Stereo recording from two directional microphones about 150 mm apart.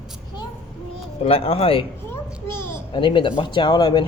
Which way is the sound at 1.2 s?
40° left (ahead or behind).